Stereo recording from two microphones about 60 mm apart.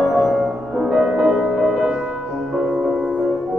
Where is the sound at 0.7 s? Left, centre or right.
Centre.